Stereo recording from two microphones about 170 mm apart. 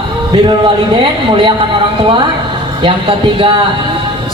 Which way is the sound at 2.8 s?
30° right (ahead or behind).